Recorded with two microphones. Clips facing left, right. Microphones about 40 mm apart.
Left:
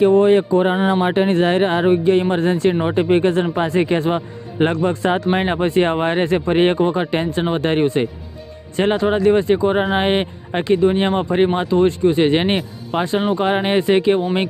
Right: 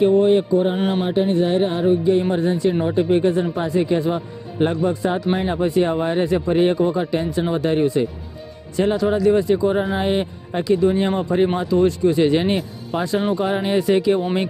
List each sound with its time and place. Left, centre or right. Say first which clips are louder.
0.1 s a man's voice: left 2 dB; left